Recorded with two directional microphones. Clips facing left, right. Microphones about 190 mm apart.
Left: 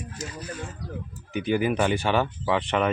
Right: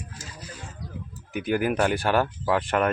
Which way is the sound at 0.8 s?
65° left (ahead or behind).